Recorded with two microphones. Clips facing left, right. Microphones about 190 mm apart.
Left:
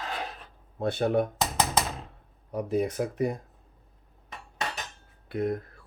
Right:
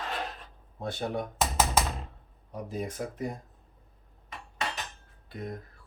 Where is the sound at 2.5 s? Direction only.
70° left (ahead or behind).